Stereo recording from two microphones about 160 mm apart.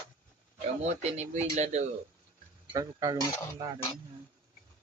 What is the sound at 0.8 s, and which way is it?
Speech, 45° right (ahead or behind).